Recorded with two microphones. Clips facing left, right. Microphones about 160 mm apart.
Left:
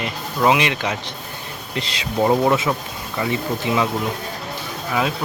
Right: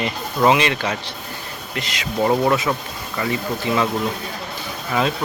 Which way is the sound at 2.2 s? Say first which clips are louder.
Left 1 dB; 15° left (ahead or behind).